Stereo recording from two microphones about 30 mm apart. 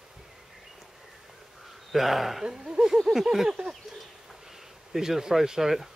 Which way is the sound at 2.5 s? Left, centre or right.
Right.